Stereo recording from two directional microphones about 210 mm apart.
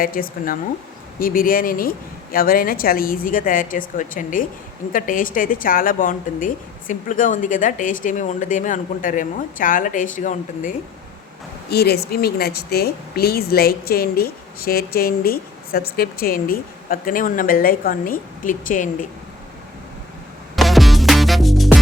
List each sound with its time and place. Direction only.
0.0 s a woman's voice: 45° left (ahead or behind)
11.7 s a woman's voice: 50° left (ahead or behind)
20.6 s music: centre (ahead or behind)